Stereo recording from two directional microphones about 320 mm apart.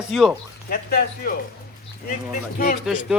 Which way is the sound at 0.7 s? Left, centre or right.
Left.